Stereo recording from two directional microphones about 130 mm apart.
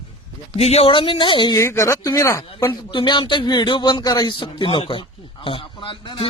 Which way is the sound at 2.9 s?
35° left (ahead or behind).